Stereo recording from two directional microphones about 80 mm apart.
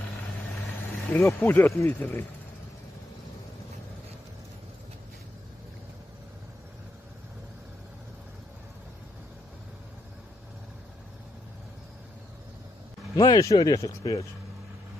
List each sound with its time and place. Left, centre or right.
1.1 s speech: left
13.1 s speech: left